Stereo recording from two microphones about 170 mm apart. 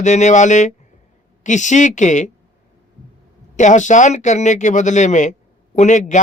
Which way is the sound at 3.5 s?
45° left (ahead or behind).